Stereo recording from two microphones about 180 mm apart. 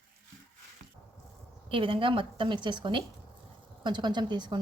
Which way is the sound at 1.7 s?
30° right (ahead or behind).